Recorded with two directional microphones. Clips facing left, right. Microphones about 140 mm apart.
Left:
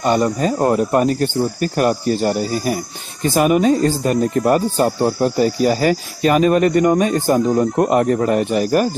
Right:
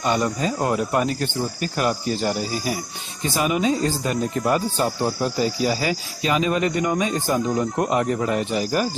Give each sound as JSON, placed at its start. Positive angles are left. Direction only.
{"t": 0.0, "sound": "speech", "side_deg": 45}